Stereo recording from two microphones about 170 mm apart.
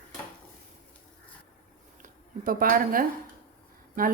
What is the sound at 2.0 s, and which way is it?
A woman's voice, 55° right (ahead or behind).